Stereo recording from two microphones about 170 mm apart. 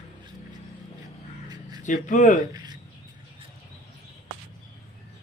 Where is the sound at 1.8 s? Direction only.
45° left (ahead or behind).